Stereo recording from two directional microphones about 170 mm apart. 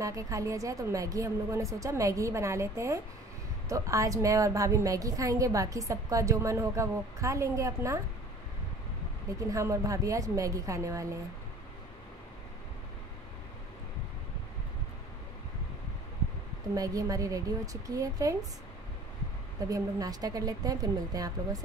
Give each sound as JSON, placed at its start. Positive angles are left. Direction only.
{"t": 0.0, "sound": "a woman's voice", "side_deg": -20}
{"t": 9.5, "sound": "a woman's voice", "side_deg": -20}
{"t": 16.7, "sound": "a woman's voice", "side_deg": -20}
{"t": 19.7, "sound": "a woman's voice", "side_deg": -20}